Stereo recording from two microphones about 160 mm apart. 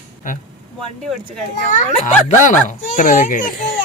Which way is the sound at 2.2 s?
50° left (ahead or behind).